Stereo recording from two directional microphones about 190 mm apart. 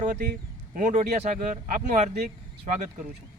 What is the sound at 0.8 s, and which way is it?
Speech, 40° right (ahead or behind).